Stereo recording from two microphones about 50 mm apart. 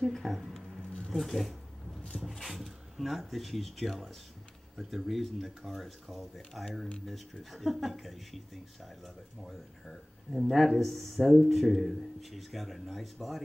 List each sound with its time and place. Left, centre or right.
0.0 s speech: centre
0.5 s a sound: centre
2.2 s speech: centre